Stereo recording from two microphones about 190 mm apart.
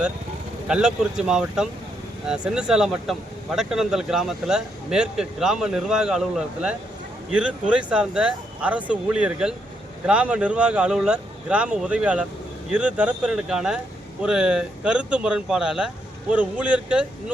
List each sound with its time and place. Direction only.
0.7 s speech: 5° right (ahead or behind)